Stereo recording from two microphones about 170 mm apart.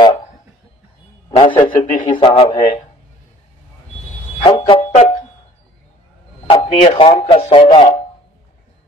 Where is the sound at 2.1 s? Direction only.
30° left (ahead or behind).